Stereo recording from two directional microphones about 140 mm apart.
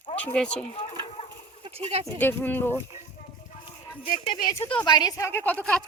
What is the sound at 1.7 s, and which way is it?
Speech, 45° right (ahead or behind).